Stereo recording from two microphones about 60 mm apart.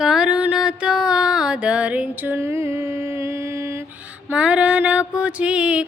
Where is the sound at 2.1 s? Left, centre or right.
Right.